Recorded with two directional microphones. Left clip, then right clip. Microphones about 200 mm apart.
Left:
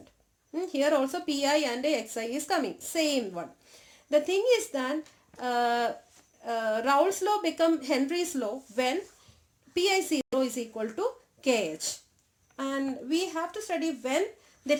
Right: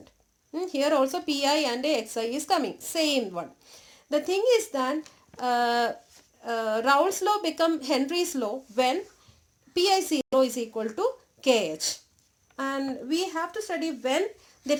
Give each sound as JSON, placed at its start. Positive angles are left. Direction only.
{"t": 0.5, "sound": "a woman's voice", "side_deg": -20}